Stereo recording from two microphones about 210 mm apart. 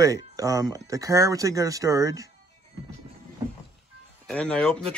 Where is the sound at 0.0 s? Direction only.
15° right (ahead or behind).